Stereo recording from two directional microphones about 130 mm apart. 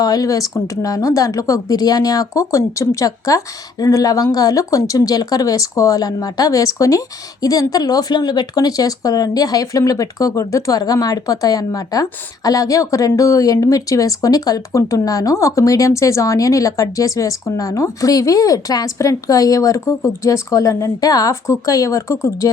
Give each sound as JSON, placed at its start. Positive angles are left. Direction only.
{"t": 0.0, "sound": "speech", "side_deg": 30}